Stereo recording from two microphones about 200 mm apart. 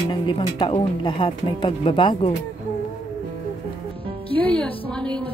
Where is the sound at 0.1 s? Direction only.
20° left (ahead or behind).